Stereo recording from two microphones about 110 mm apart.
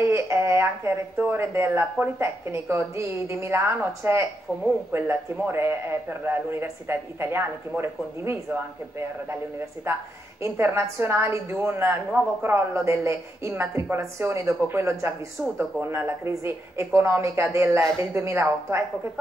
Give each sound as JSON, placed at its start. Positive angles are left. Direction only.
{"t": 0.0, "sound": "a man's voice", "side_deg": -25}
{"t": 10.4, "sound": "a man's voice", "side_deg": -25}